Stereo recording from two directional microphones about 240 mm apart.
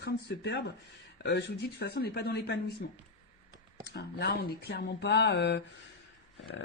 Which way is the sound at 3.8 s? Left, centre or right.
Left.